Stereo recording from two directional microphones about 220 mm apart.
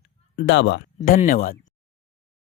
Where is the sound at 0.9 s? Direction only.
40° left (ahead or behind).